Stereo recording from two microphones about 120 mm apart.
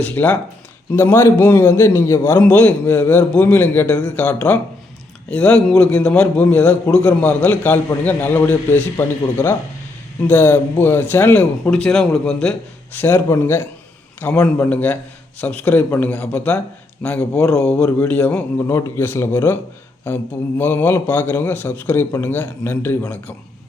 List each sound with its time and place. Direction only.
0.0 s a man's voice: 15° left (ahead or behind)
2.4 s a man's voice: 15° left (ahead or behind)
17.3 s a man's voice: 25° left (ahead or behind)
17.6 s a man's voice: 5° left (ahead or behind)
20.6 s a man's voice: 15° left (ahead or behind)